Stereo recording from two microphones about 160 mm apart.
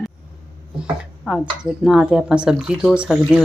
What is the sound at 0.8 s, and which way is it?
A woman's voice, 5° right (ahead or behind).